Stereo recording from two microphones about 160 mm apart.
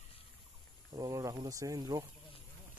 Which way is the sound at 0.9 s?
25° right (ahead or behind).